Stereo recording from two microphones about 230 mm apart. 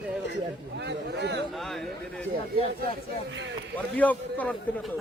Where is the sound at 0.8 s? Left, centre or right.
Right.